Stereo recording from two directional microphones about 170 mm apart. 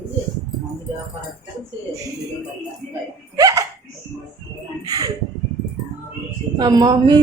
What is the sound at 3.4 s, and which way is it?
Laughter, 20° right (ahead or behind).